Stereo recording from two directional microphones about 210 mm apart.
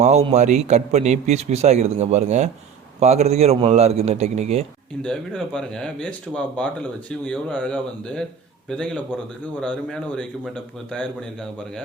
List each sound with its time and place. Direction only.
0.0 s a man's voice: 30° right (ahead or behind)
5.0 s speech: 5° left (ahead or behind)